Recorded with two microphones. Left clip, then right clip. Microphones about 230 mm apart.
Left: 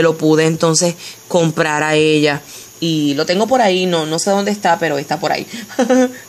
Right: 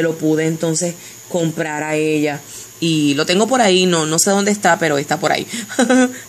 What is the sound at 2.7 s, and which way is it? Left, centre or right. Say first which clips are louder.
Speech: even; centre.